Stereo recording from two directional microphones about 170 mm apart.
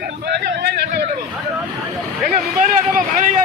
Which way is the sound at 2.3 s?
50° right (ahead or behind).